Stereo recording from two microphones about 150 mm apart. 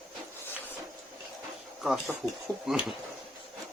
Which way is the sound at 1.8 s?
5° right (ahead or behind).